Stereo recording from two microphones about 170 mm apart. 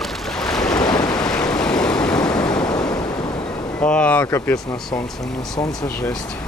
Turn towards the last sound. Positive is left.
turn(degrees=10)  # may be behind; listen again after turning